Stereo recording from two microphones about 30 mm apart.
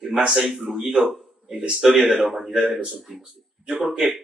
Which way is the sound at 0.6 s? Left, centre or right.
Centre.